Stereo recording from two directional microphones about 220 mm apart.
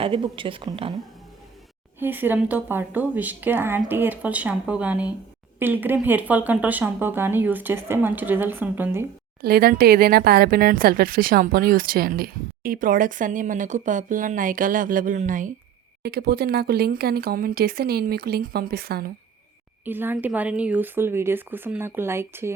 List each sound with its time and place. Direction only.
0.0 s a woman's voice: 25° right (ahead or behind)
2.0 s speech: 10° right (ahead or behind)
9.4 s speech: 45° right (ahead or behind)
19.8 s speech: 10° right (ahead or behind)